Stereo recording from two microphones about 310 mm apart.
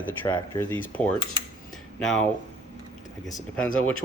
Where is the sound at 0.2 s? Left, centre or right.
Centre.